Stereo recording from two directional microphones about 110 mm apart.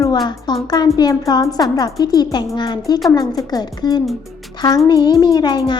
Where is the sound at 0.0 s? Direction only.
40° left (ahead or behind).